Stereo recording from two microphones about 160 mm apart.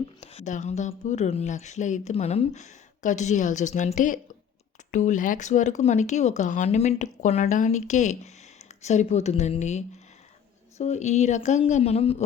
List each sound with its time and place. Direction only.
0.2 s a woman's voice: 40° left (ahead or behind)